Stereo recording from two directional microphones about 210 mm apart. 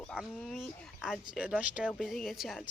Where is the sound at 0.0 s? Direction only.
Centre (ahead or behind).